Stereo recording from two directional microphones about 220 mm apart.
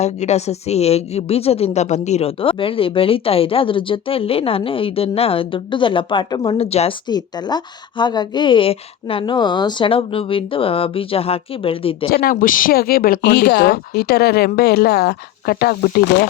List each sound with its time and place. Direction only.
0.0 s a woman's voice: 30° left (ahead or behind)
12.1 s speech: 40° left (ahead or behind)